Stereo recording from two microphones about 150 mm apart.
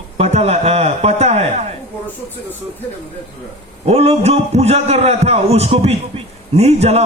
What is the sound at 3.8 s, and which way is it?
A man's voice, 45° right (ahead or behind).